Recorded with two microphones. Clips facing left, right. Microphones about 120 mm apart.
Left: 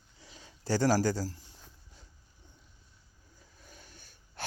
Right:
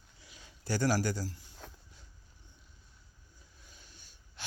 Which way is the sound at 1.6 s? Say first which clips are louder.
Right 8 dB; 80° right.